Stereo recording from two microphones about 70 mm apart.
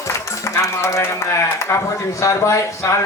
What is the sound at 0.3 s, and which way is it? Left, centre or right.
A man's voice, left.